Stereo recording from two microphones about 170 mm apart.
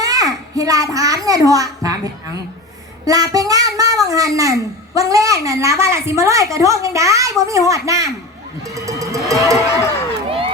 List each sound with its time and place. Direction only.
0.0 s a child's voice: 20° right (ahead or behind)
8.7 s music: 20° right (ahead or behind)
9.3 s a woman's voice: 20° right (ahead or behind)
10.2 s crowd: 35° right (ahead or behind)